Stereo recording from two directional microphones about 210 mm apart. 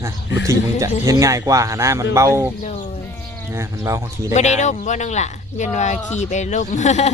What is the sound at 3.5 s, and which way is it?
Speech, 15° right (ahead or behind).